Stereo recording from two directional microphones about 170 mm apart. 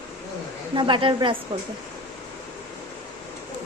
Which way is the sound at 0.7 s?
30° right (ahead or behind).